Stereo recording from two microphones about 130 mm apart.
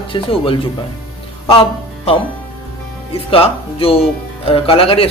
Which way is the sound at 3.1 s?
45° left (ahead or behind).